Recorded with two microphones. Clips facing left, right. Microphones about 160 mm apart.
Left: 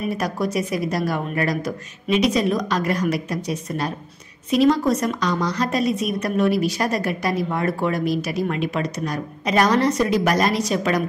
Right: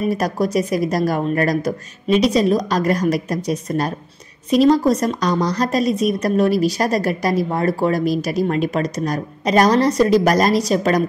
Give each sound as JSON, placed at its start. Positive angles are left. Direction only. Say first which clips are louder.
{"t": 0.1, "sound": "a woman's voice", "louder": "right 4 dB", "side_deg": -40}